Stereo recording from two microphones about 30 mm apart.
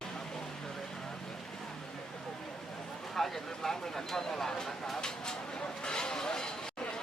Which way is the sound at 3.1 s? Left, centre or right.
Centre.